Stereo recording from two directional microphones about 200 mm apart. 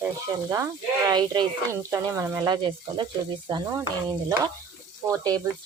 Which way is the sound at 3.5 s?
20° right (ahead or behind).